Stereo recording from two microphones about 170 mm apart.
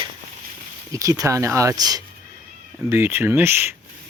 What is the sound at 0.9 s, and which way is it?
Speech, 20° right (ahead or behind).